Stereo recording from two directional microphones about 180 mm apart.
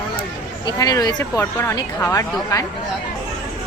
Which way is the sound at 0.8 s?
20° left (ahead or behind).